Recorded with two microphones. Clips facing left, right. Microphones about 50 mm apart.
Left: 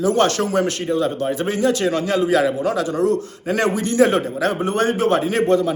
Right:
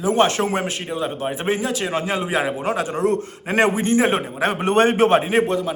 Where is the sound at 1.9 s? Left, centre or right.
Right.